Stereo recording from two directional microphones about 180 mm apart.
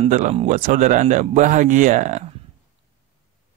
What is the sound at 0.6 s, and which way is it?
Speech, 50° right (ahead or behind).